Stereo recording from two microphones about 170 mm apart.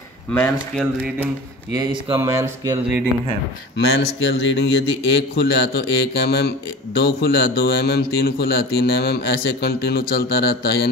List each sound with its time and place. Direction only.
0.3 s speech: 10° left (ahead or behind)
1.8 s speech: 25° right (ahead or behind)
3.7 s speech: 90° left
5.3 s speech: 75° left (ahead or behind)